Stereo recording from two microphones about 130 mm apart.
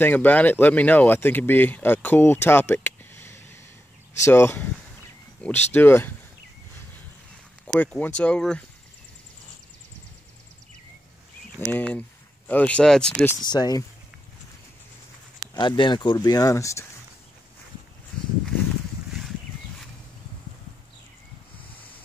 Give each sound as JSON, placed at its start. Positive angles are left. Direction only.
{"t": 0.0, "sound": "speech", "side_deg": 15}
{"t": 7.6, "sound": "speech", "side_deg": 10}
{"t": 11.5, "sound": "speech", "side_deg": 15}
{"t": 13.4, "sound": "speech", "side_deg": 30}
{"t": 15.4, "sound": "speech", "side_deg": 30}